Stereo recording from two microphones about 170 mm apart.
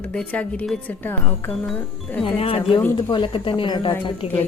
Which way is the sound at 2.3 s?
35° left (ahead or behind).